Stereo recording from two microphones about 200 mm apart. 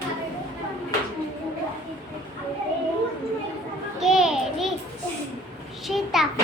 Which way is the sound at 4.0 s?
5° right (ahead or behind).